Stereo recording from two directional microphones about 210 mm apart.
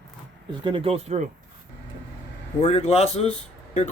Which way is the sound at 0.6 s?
25° right (ahead or behind).